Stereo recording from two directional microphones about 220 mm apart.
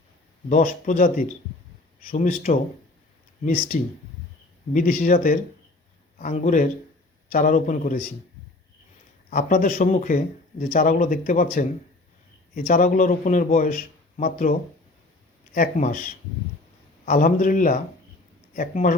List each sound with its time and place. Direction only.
0.5 s speech: 40° left (ahead or behind)
9.3 s speech: 40° left (ahead or behind)
15.5 s speech: 35° left (ahead or behind)